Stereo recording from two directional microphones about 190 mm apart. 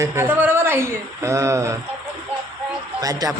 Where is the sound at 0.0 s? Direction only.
15° right (ahead or behind).